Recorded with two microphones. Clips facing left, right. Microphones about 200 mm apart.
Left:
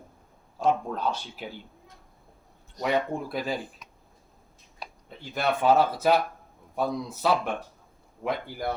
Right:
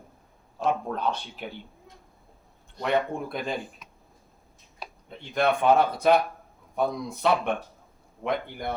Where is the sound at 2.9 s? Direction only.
5° left (ahead or behind).